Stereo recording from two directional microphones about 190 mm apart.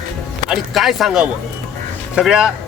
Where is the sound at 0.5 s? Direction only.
Centre (ahead or behind).